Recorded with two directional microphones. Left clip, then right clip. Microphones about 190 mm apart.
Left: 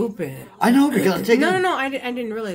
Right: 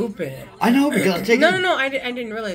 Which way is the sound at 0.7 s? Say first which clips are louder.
Even; 10° left (ahead or behind).